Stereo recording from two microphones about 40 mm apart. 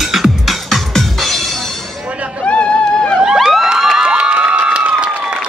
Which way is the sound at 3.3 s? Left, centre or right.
Centre.